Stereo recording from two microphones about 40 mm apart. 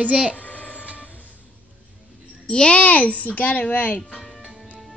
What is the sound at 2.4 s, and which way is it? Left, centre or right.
Speech, left.